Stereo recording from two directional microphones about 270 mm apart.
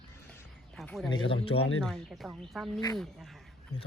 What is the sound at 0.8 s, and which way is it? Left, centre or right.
Speech, centre.